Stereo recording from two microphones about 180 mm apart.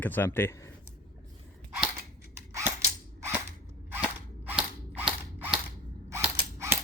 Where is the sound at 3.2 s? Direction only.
15° right (ahead or behind).